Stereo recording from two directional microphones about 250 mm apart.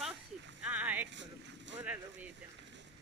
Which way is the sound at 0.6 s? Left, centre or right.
Centre.